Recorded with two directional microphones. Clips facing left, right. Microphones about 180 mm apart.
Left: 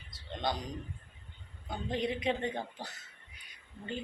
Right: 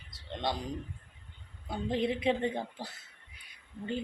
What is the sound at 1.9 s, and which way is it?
Speech, 30° right (ahead or behind).